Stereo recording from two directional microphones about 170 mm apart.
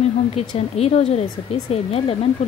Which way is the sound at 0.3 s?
35° left (ahead or behind).